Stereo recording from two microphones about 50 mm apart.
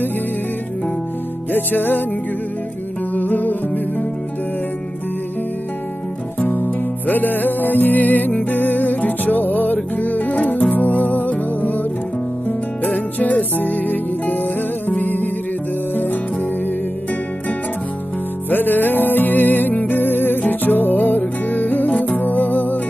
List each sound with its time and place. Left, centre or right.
1.5 s music: left
3.2 s music: left
6.4 s music: left
18.5 s music: left